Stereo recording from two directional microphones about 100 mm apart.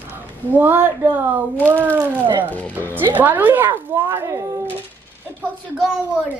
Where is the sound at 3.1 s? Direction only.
20° right (ahead or behind).